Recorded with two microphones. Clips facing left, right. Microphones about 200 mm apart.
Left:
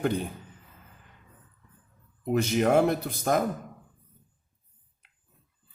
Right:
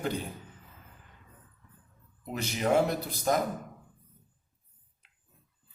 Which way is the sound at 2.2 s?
55° left (ahead or behind).